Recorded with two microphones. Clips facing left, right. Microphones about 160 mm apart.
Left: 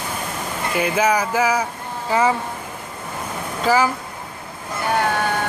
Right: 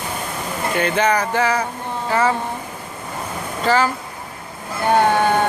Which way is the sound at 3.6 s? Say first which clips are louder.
Even; 10° left (ahead or behind).